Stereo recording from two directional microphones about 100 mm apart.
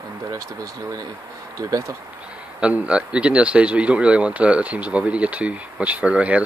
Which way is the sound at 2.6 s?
10° right (ahead or behind).